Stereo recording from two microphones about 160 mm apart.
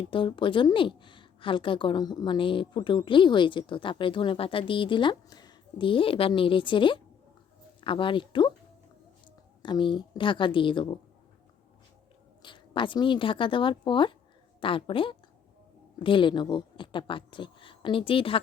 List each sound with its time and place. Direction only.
0.0 s a woman's voice: 30° left (ahead or behind)
9.6 s a woman's voice: 30° left (ahead or behind)
12.4 s a woman's voice: 30° left (ahead or behind)